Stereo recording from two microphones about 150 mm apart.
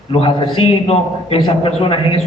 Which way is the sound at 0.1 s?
35° left (ahead or behind).